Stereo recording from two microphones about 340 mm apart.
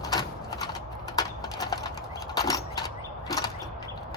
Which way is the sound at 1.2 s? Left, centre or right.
Centre.